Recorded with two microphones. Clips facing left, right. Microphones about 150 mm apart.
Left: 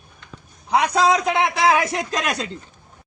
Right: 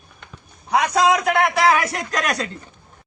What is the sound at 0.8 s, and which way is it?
Speech, 25° left (ahead or behind).